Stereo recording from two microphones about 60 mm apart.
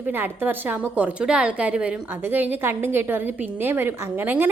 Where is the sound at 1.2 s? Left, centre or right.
Centre.